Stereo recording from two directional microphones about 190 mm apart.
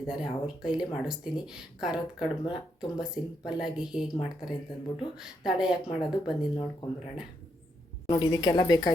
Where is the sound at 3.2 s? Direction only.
30° left (ahead or behind).